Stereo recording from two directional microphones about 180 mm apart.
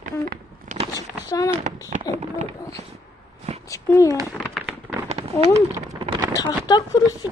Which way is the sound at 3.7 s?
15° left (ahead or behind).